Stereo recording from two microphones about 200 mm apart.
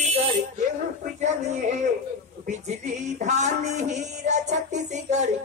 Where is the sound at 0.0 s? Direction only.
35° right (ahead or behind).